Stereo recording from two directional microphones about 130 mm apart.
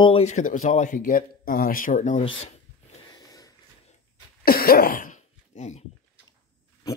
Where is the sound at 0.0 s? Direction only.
50° left (ahead or behind); by 2.2 s 65° left (ahead or behind).